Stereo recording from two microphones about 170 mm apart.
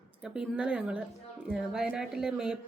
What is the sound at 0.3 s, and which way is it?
Speech, 5° right (ahead or behind).